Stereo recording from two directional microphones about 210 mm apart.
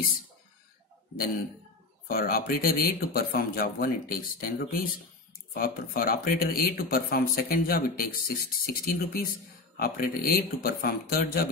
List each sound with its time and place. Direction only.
2.0 s speech: 45° left (ahead or behind)